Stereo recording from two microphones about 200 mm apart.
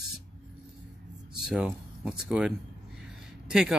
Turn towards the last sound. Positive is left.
turn(degrees=-5)  # may be behind; listen again after turning